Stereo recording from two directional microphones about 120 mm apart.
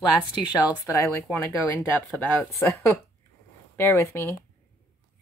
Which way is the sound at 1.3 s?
20° left (ahead or behind).